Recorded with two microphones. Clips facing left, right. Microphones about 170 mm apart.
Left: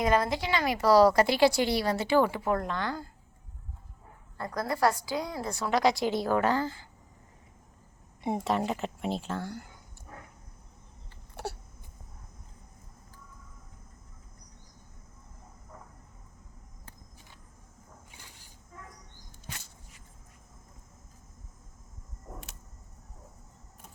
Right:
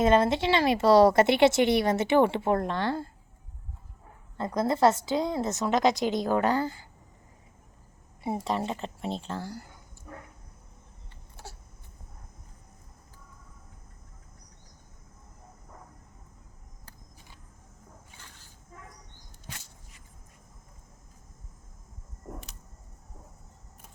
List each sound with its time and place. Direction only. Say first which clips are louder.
0.0 s speech: right 4 dB; 25° right (ahead or behind)
4.4 s speech: right 4 dB; 20° right (ahead or behind)
8.2 s a woman's voice: left 1 dB; centre (ahead or behind)
11.4 s a sound: left 10 dB; 65° left (ahead or behind)